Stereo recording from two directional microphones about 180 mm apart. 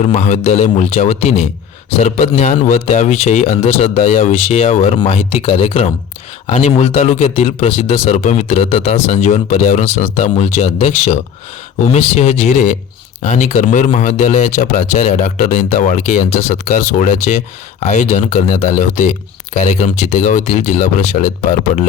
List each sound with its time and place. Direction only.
0.0 s speech: 40° left (ahead or behind)